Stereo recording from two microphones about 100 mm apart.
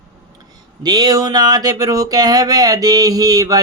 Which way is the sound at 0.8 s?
45° right (ahead or behind).